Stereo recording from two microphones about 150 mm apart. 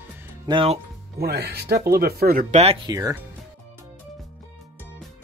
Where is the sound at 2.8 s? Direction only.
25° right (ahead or behind).